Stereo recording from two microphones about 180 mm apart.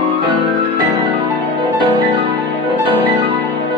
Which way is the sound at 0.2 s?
25° right (ahead or behind).